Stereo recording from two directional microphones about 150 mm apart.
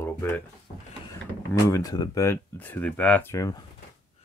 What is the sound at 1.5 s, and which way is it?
Speech, 25° left (ahead or behind).